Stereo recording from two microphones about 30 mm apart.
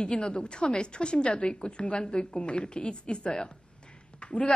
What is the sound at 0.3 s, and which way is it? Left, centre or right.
A woman's voice, left.